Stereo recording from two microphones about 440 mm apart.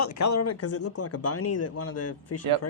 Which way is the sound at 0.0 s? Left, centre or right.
Left.